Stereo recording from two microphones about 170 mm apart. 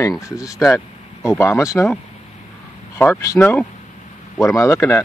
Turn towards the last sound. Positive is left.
turn(degrees=15)  # may be behind; listen again after turning